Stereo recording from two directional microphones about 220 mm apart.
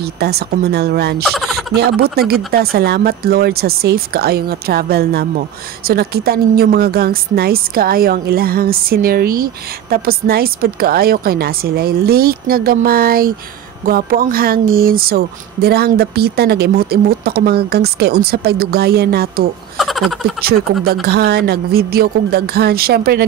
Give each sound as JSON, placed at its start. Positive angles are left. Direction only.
{"t": 0.0, "sound": "a woman's voice", "side_deg": -45}
{"t": 1.2, "sound": "speech", "side_deg": 0}
{"t": 1.8, "sound": "a woman's voice", "side_deg": -45}
{"t": 19.8, "sound": "a sound", "side_deg": 0}
{"t": 20.8, "sound": "a woman's voice", "side_deg": -45}